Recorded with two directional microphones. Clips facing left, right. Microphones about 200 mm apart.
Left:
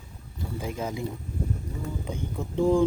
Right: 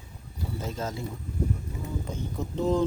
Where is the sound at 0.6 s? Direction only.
15° left (ahead or behind).